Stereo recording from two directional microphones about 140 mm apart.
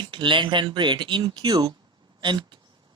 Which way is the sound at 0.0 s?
35° right (ahead or behind).